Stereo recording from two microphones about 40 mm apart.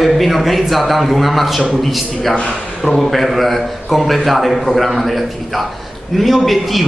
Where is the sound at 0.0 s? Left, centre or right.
Centre.